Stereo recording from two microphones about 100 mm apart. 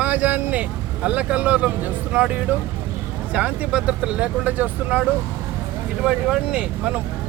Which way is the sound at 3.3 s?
15° right (ahead or behind).